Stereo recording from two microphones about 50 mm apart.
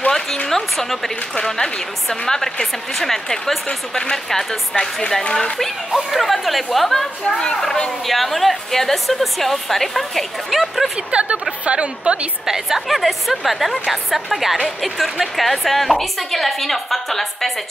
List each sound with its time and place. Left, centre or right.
0.5 s a woman's voice: centre
8.1 s a woman's voice: centre
11.1 s a woman's voice: right
12.4 s a woman's voice: centre